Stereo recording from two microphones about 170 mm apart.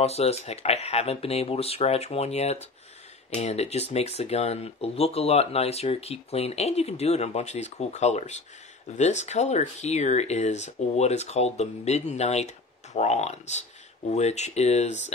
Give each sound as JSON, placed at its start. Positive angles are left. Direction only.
{"t": 0.0, "sound": "speech", "side_deg": 40}